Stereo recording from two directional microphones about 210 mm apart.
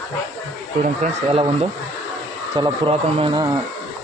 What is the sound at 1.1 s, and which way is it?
Speech, 30° right (ahead or behind).